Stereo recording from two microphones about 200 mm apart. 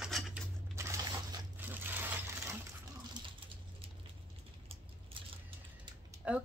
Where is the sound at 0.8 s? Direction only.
15° right (ahead or behind).